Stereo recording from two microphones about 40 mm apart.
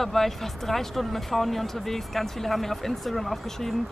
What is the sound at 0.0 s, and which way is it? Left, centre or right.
Speech, centre.